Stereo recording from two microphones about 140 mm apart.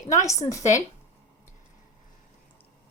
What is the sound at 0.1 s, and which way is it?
Speech, 20° left (ahead or behind).